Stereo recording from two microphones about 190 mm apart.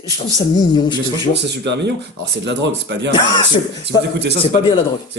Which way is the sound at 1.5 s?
65° right (ahead or behind).